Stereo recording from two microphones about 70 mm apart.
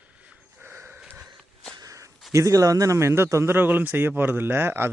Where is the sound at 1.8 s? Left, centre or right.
Right.